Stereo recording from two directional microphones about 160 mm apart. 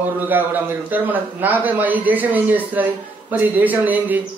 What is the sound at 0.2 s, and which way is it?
A man's voice, 10° right (ahead or behind).